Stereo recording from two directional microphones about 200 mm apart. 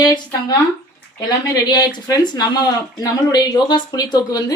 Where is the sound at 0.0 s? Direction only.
20° left (ahead or behind).